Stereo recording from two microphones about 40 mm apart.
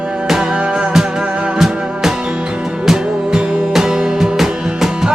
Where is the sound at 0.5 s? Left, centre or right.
Right.